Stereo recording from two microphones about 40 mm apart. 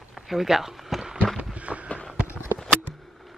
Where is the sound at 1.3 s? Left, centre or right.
Right.